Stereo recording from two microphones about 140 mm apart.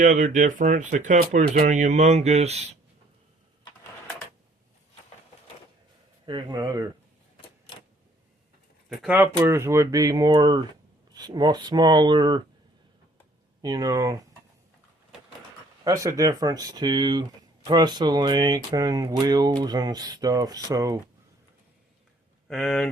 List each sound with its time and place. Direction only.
0.0 s speech: 65° right (ahead or behind)
6.2 s speech: 30° right (ahead or behind)
8.9 s speech: centre (ahead or behind)
9.1 s speech: 20° right (ahead or behind)
13.6 s speech: 30° right (ahead or behind)
15.8 s speech: 25° right (ahead or behind)
22.4 s speech: centre (ahead or behind)